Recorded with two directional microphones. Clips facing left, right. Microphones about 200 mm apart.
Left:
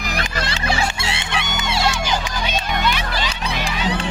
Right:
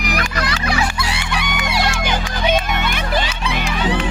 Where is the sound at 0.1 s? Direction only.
30° left (ahead or behind).